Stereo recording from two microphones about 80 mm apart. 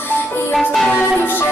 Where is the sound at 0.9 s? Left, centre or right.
Left.